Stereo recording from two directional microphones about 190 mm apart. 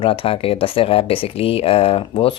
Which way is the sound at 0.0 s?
30° left (ahead or behind).